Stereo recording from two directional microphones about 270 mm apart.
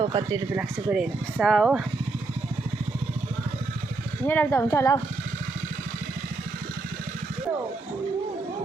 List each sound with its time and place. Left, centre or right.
0.0 s speech: centre
4.3 s speech: centre